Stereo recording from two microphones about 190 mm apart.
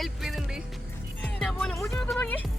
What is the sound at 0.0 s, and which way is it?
Music, centre (ahead or behind).